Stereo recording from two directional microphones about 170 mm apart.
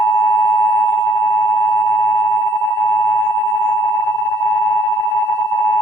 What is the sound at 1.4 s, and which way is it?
Busy signal, 15° left (ahead or behind).